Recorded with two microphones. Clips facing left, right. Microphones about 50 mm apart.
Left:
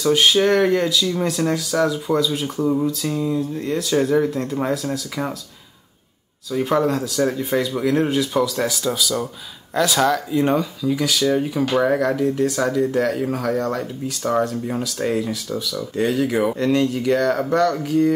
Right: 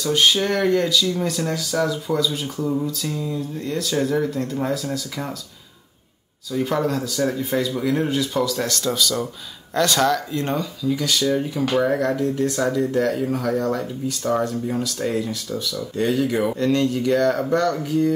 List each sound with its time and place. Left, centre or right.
0.0 s speech: centre
2.6 s speech: centre
6.6 s speech: centre
13.7 s speech: centre